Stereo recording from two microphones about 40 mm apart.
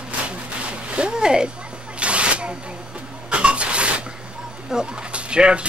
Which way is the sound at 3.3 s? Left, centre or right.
Right.